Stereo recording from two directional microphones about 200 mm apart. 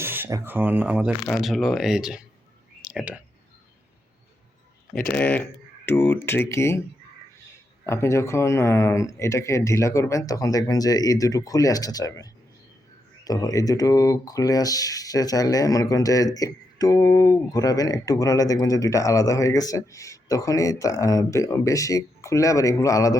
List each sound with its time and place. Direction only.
0.0 s speech: 10° right (ahead or behind)
5.1 s speech: 10° left (ahead or behind)
7.9 s speech: 15° left (ahead or behind)